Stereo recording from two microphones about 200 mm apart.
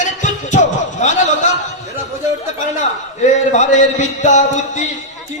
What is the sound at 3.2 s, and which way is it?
A man's voice, 35° left (ahead or behind).